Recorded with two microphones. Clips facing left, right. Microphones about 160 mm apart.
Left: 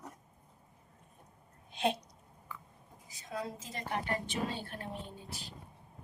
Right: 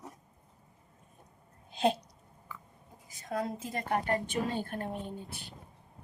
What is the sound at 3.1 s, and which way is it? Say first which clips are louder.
A woman's voice: right 5 dB; 55° right (ahead or behind).